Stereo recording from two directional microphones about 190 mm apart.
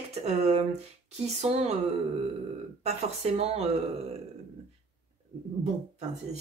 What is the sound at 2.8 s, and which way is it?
Speech, 35° right (ahead or behind).